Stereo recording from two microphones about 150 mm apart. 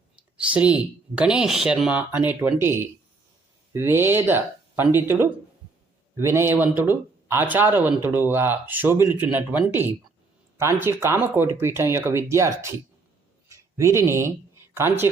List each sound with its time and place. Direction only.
0.3 s speech: 10° right (ahead or behind)